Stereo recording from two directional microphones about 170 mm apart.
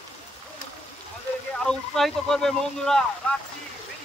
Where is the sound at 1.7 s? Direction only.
Centre (ahead or behind).